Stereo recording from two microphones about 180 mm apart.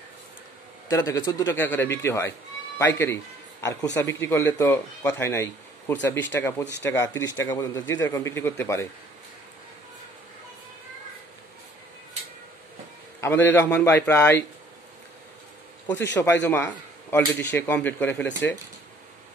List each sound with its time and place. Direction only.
0.8 s speech: 20° left (ahead or behind)
6.6 s speech: 80° left
6.9 s speech: 15° left (ahead or behind)
13.2 s speech: 10° left (ahead or behind)
15.9 s speech: 15° left (ahead or behind)